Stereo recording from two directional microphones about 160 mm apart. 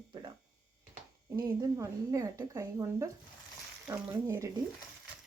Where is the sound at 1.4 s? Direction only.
15° right (ahead or behind).